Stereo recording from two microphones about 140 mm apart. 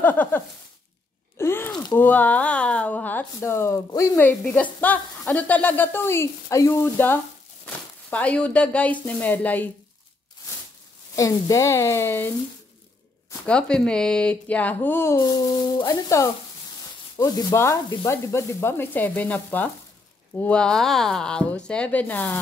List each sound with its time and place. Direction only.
0.0 s speech: 10° left (ahead or behind)
1.4 s groan: 15° left (ahead or behind)
2.0 s speech: 10° left (ahead or behind)
11.1 s speech: 25° left (ahead or behind)
13.5 s speech: 5° left (ahead or behind)
15.1 s speech: 30° left (ahead or behind); by 22.4 s 10° left (ahead or behind)